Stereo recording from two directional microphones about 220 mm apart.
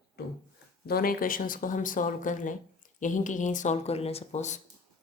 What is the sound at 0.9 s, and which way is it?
Speech, 40° left (ahead or behind).